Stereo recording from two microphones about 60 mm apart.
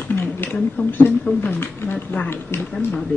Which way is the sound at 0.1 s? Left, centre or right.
Left.